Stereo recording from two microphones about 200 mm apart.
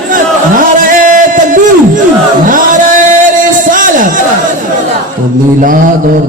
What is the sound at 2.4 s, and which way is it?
Music, 40° right (ahead or behind).